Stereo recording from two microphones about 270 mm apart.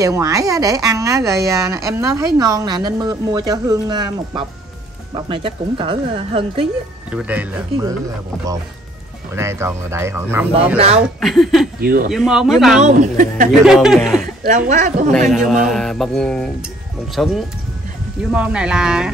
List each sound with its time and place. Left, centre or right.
0.0 s speech: centre
7.1 s mantra: centre
9.3 s speech: centre
11.0 s mantra: centre
11.8 s speech: right
12.1 s mantra: centre
12.8 s speech: right
13.5 s mantra: centre
14.2 s a woman's voice: right
15.2 s mantra: centre